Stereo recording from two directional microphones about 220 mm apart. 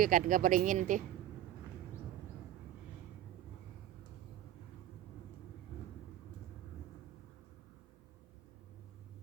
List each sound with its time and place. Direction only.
0.0 s speech: 40° right (ahead or behind)